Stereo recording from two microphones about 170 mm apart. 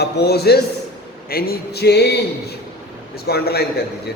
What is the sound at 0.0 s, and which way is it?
A man's voice, 75° left (ahead or behind).